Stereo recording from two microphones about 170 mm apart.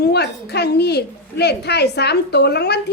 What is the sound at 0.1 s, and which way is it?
A woman's voice, 75° left (ahead or behind).